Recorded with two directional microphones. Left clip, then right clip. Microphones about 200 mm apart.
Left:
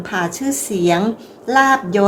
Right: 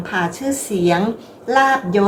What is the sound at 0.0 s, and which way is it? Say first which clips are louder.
A woman's voice: even; 25° left (ahead or behind).